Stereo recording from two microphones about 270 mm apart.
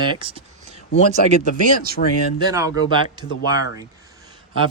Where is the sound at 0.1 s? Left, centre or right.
Centre.